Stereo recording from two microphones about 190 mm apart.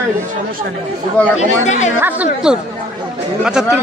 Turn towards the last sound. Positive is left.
turn(degrees=-5)  # may be behind; listen again after turning